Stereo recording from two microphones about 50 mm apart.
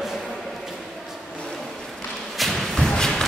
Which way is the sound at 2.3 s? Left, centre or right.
Centre.